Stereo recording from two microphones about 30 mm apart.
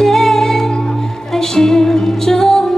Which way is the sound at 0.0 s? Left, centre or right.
Centre.